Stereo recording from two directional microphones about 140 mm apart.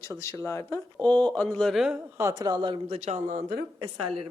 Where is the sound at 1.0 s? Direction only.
10° left (ahead or behind).